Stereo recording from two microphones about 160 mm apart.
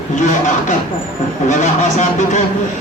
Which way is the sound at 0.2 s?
55° left (ahead or behind).